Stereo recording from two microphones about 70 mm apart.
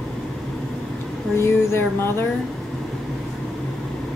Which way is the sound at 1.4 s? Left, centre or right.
Left.